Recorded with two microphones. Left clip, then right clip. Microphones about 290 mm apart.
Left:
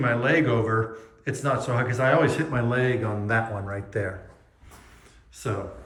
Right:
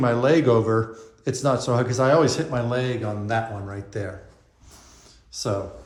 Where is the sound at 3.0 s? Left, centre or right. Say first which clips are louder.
Even; centre.